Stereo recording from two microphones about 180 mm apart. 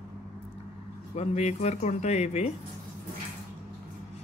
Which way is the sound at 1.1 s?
40° left (ahead or behind).